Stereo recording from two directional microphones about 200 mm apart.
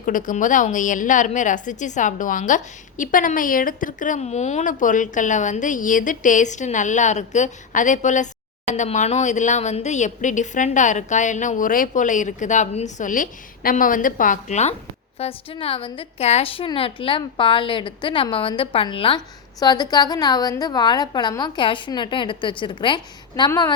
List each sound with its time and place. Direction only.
0.0 s a woman's voice: 40° left (ahead or behind); by 23.7 s 20° left (ahead or behind)